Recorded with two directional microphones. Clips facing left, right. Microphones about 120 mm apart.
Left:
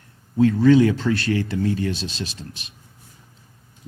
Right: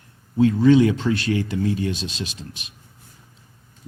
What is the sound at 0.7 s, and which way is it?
Speech, 35° left (ahead or behind).